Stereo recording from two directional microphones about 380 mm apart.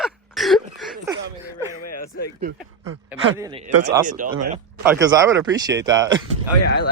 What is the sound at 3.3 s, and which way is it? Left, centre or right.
Speech, centre.